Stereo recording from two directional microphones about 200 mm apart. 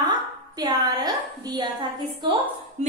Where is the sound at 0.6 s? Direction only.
20° right (ahead or behind).